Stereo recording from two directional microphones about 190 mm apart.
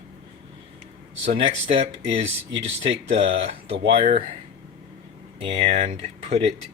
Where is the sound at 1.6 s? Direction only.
30° right (ahead or behind).